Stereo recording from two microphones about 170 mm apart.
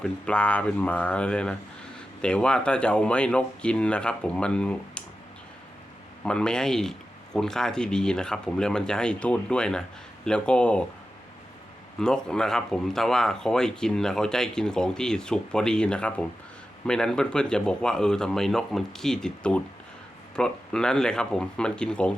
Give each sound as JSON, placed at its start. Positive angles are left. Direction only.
{"t": 0.0, "sound": "speech", "side_deg": 5}
{"t": 6.2, "sound": "speech", "side_deg": 5}
{"t": 11.9, "sound": "speech", "side_deg": 5}